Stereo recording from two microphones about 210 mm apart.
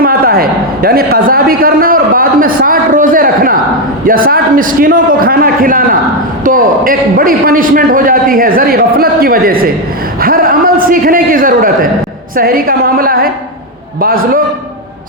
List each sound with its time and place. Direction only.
0.0 s a man's voice: 45° right (ahead or behind)